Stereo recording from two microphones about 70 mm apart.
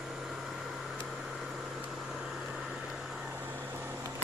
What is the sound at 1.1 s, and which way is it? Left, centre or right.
Vehicle, centre.